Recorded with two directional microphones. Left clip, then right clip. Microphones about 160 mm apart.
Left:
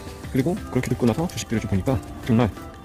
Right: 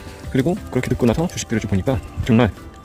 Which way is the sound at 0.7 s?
15° right (ahead or behind).